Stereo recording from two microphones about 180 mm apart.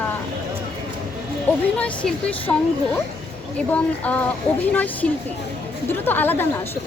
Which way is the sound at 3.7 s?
10° left (ahead or behind).